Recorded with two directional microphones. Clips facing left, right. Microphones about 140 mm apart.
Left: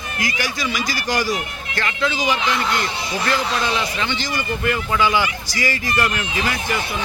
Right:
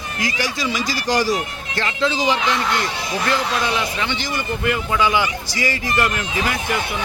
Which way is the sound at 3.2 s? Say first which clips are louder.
Even; 15° right (ahead or behind).